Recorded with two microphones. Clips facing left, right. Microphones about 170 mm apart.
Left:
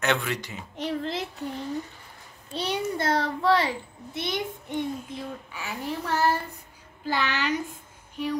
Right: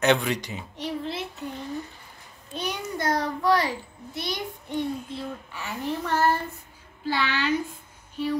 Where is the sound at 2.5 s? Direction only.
30° left (ahead or behind); by 5.7 s 10° left (ahead or behind).